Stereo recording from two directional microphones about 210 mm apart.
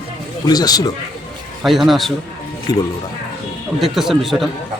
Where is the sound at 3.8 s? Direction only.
Centre (ahead or behind).